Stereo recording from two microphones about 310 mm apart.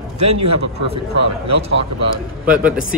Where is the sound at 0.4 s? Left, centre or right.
Right.